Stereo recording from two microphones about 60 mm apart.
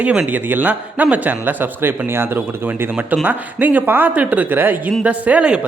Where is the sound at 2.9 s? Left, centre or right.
Right.